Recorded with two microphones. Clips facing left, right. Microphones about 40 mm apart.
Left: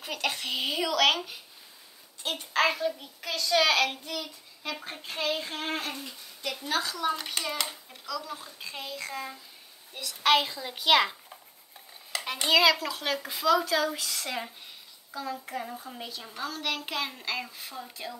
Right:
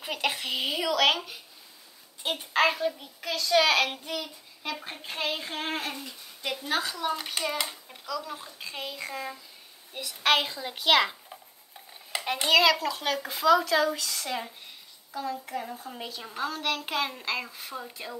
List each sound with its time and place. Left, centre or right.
0.0 s a child's voice: centre
0.5 s speech: centre
2.2 s a child's voice: centre
2.6 s a child's voice: centre
6.4 s a woman's voice: right
6.8 s a child's voice: centre
12.3 s a child's voice: centre
12.8 s speech: centre
13.9 s speech: centre
15.6 s speech: centre
15.9 s a child's voice: centre